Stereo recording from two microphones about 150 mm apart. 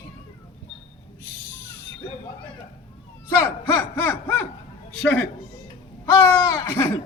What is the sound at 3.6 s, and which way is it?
Speech, 15° left (ahead or behind).